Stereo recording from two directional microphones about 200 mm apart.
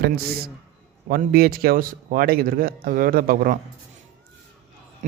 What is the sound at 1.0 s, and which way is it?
A man's voice, 45° right (ahead or behind).